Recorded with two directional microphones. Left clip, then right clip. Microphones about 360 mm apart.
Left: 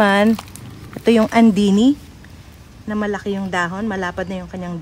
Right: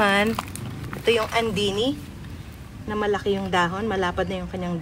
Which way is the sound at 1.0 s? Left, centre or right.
Left.